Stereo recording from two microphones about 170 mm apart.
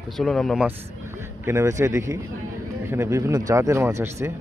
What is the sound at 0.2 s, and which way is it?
Speech, centre (ahead or behind).